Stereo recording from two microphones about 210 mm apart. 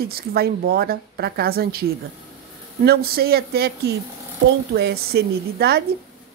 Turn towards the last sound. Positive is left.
turn(degrees=-50)  # may be behind; listen again after turning